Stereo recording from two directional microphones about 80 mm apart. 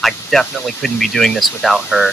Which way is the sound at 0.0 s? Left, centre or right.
Centre.